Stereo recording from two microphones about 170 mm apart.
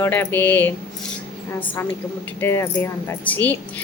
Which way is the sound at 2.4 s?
15° left (ahead or behind).